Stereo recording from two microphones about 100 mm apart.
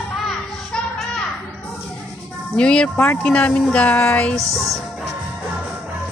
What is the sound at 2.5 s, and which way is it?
Speech, 10° left (ahead or behind).